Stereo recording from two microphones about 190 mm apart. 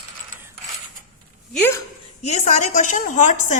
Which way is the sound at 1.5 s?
10° left (ahead or behind).